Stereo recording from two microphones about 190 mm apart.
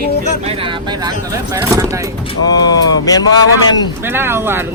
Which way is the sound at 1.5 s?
15° right (ahead or behind).